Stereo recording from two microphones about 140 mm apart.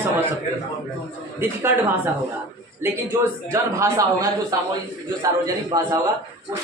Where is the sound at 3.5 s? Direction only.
20° right (ahead or behind).